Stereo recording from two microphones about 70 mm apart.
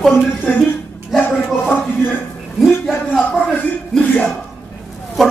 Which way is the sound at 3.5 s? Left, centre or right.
Centre.